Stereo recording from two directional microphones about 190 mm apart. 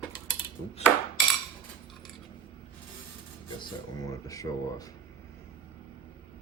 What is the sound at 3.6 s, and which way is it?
Speech, 20° left (ahead or behind).